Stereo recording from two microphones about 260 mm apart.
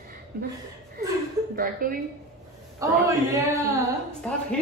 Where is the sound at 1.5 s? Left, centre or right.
Right.